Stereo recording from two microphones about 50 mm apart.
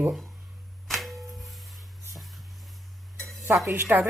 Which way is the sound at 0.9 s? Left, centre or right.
Centre.